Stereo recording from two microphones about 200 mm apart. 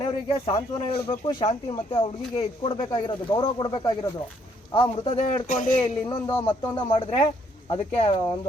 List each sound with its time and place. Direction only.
0.0 s a man's voice: 25° left (ahead or behind); by 5.8 s 40° left (ahead or behind)
5.8 s speech: 20° left (ahead or behind)